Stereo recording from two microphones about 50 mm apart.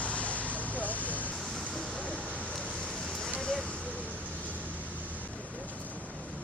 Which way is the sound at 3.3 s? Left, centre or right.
Centre.